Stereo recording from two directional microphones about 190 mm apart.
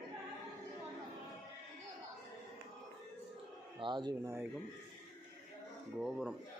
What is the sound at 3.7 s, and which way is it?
Speech, 25° right (ahead or behind).